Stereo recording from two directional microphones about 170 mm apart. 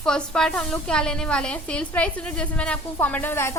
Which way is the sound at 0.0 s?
5° left (ahead or behind).